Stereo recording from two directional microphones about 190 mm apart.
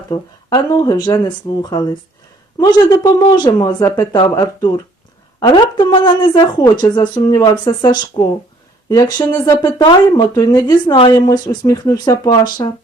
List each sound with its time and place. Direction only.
0.1 s speech: 20° left (ahead or behind)
2.6 s speech: 20° left (ahead or behind)